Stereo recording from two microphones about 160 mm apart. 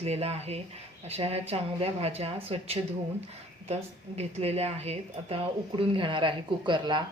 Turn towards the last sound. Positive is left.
turn(degrees=-30)  # may be behind; listen again after turning